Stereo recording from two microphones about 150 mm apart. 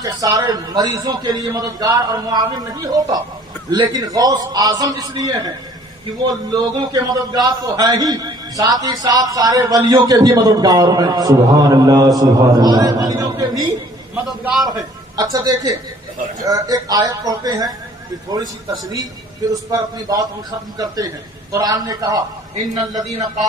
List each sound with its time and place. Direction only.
0.0 s a man's voice: 25° right (ahead or behind)
14.4 s a man's voice: centre (ahead or behind)
14.7 s a man's voice: 25° right (ahead or behind)